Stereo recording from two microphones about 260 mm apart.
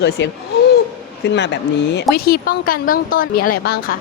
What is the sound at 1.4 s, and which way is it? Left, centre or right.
Speech, left.